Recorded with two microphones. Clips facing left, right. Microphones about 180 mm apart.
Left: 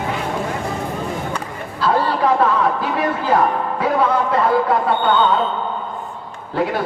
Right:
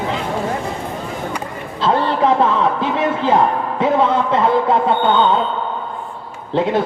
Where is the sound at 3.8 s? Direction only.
25° right (ahead or behind).